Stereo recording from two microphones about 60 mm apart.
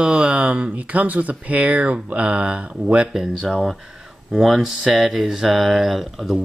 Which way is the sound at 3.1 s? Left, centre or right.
Centre.